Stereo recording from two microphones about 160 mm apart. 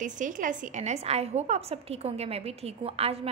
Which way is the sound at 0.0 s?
55° right (ahead or behind).